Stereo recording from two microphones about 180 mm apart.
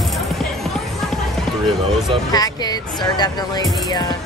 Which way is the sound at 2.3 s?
20° left (ahead or behind).